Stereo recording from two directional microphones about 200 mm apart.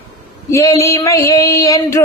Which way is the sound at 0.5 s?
15° left (ahead or behind).